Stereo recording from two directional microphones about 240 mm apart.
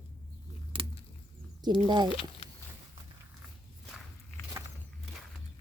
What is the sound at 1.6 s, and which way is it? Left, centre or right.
Speech, centre.